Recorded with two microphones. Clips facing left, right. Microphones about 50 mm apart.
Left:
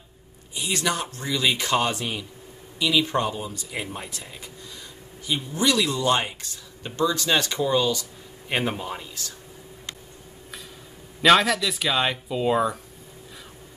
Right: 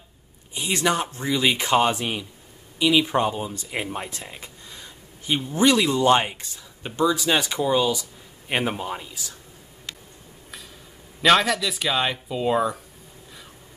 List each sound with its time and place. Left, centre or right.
0.6 s speech: right
3.4 s speech: right; by 9.3 s centre
11.2 s speech: centre